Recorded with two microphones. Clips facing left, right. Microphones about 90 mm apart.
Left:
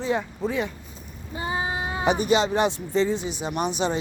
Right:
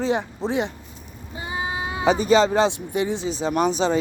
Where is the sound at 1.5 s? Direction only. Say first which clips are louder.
Even; 35° left (ahead or behind).